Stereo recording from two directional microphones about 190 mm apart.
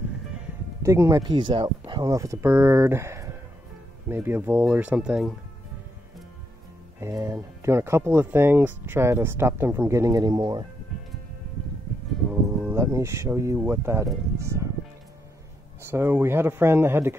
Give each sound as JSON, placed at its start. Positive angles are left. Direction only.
{"t": 0.8, "sound": "speech", "side_deg": -15}
{"t": 7.0, "sound": "speech", "side_deg": -15}
{"t": 12.4, "sound": "speech", "side_deg": -15}
{"t": 15.8, "sound": "speech", "side_deg": -10}